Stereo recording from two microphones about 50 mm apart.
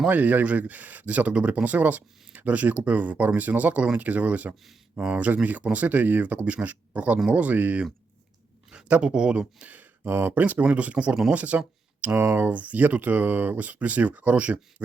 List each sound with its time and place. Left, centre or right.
0.1 s speech: right
8.9 s speech: centre
10.1 s speech: right
10.4 s speech: right